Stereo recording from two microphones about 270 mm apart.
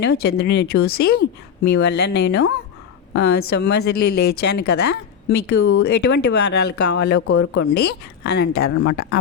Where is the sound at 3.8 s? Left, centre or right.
Left.